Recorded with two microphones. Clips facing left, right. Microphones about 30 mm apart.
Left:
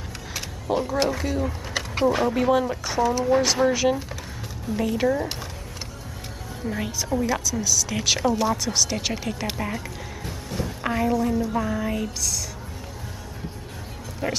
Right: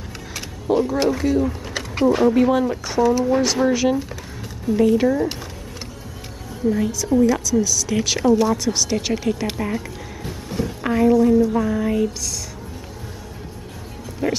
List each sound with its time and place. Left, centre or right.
0.3 s speech: centre
6.8 s a woman's voice: left
7.1 s speech: centre
14.2 s speech: centre